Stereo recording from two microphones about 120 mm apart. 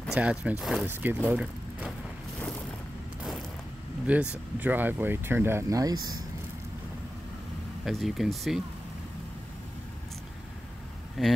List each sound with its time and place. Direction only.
0.1 s speech: 5° right (ahead or behind)
0.8 s speech: 15° right (ahead or behind)
4.1 s speech: 10° right (ahead or behind); by 6.1 s 30° right (ahead or behind)
7.8 s speech: centre (ahead or behind)
11.2 s speech: centre (ahead or behind)